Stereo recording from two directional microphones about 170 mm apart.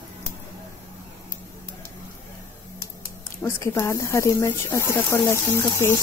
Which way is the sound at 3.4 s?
15° left (ahead or behind).